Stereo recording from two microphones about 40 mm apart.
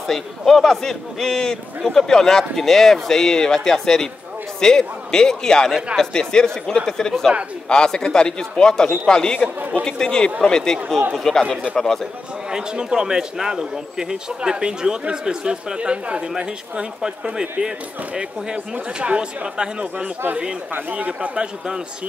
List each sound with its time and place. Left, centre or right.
0.0 s a man's voice: centre; by 9.5 s left
9.6 s speech: right
9.8 s a man's voice: centre
12.4 s a man's voice: centre
20.9 s a man's voice: right